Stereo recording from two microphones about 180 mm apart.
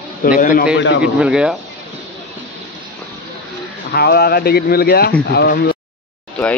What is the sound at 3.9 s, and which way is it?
Speech, 60° left (ahead or behind).